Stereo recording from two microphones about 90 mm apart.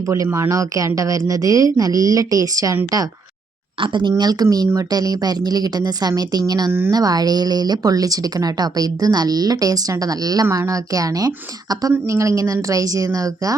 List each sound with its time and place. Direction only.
0.1 s a woman's voice: 30° right (ahead or behind)
3.8 s speech: 65° right (ahead or behind)
4.2 s speech: 45° right (ahead or behind)
6.7 s a woman's voice: 25° right (ahead or behind)
6.9 s speech: 45° right (ahead or behind)
10.4 s a woman's voice: 30° right (ahead or behind)